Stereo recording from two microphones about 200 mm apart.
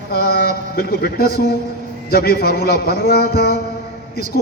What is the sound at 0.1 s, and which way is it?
A man's voice, 50° left (ahead or behind).